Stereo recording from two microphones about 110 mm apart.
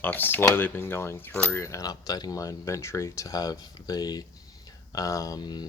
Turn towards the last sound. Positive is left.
turn(degrees=40)  # may be behind; listen again after turning